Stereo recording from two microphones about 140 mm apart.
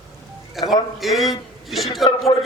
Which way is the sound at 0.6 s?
Centre (ahead or behind).